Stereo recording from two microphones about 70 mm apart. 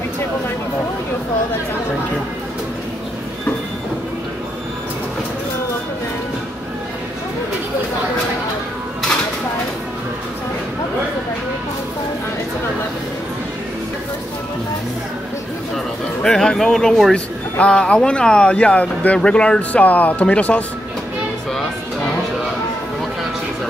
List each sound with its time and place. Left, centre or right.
16.2 s speech: centre
17.1 s speech: centre